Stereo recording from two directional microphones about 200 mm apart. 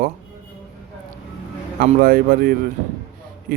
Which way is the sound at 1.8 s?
45° right (ahead or behind).